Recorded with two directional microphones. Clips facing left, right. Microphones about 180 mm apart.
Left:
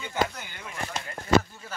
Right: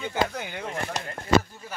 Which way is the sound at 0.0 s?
60° right (ahead or behind).